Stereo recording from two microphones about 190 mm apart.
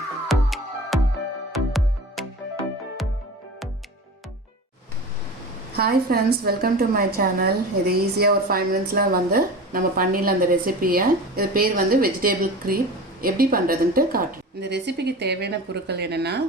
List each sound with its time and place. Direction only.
0.3 s music: centre (ahead or behind)
5.7 s a woman's voice: 55° right (ahead or behind)